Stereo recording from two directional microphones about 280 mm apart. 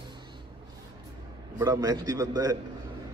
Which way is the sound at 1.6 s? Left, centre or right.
Centre.